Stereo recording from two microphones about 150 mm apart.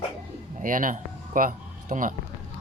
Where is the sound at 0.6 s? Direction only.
65° right (ahead or behind).